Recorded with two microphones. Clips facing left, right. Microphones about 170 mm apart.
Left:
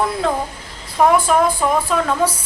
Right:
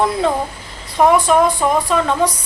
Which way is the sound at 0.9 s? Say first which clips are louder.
Right 2 dB; centre (ahead or behind).